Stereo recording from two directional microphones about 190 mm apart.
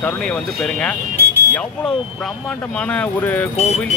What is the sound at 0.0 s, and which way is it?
Speech, 5° left (ahead or behind).